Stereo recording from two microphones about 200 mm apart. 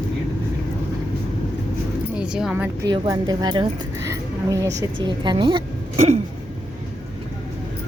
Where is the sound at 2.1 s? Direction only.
5° right (ahead or behind).